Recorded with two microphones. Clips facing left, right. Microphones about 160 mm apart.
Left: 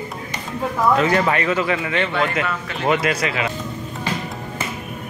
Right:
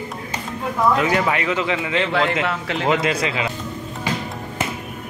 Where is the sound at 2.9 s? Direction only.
25° right (ahead or behind).